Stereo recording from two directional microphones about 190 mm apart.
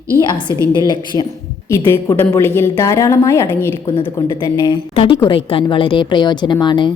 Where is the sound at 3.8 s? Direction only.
25° left (ahead or behind).